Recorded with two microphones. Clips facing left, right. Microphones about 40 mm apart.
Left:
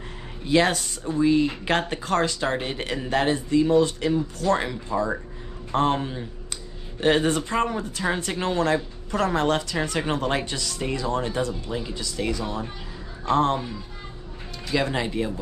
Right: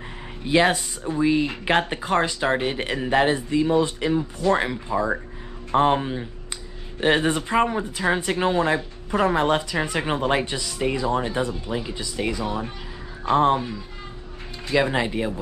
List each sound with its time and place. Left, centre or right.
0.5 s speech: centre